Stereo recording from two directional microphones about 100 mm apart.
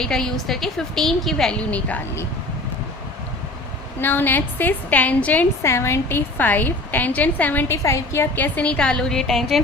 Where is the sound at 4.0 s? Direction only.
20° left (ahead or behind).